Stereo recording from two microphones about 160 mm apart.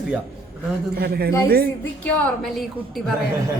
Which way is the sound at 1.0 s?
75° right (ahead or behind).